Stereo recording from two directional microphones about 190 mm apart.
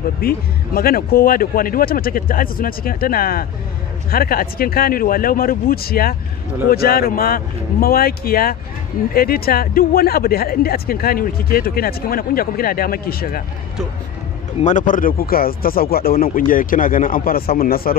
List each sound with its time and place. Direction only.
0.2 s speech: 50° left (ahead or behind)
14.6 s speech: 40° left (ahead or behind)